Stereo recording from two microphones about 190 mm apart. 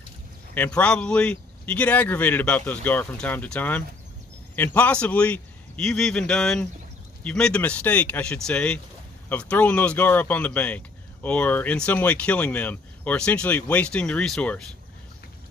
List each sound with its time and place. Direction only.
0.6 s a man's voice: 5° left (ahead or behind)